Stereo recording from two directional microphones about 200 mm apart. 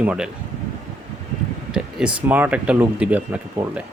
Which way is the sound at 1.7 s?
5° right (ahead or behind).